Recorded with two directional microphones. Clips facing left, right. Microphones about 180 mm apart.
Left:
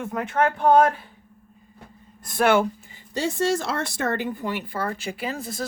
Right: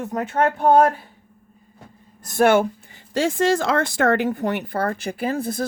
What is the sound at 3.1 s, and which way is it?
Speech, 90° right.